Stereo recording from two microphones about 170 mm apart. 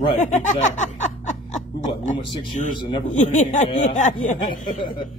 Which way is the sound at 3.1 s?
45° left (ahead or behind).